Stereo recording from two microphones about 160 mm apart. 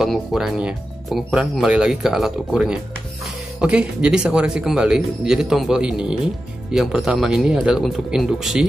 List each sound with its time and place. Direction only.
0.0 s speech: centre (ahead or behind)